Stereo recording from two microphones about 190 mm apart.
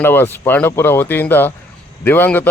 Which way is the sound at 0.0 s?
10° left (ahead or behind).